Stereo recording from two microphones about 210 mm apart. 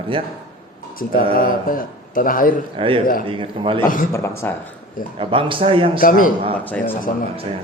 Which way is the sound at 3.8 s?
40° left (ahead or behind).